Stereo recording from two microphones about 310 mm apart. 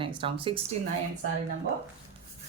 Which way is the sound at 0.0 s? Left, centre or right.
Centre.